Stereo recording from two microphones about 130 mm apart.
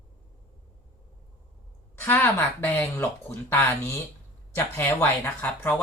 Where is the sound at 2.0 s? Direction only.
15° left (ahead or behind).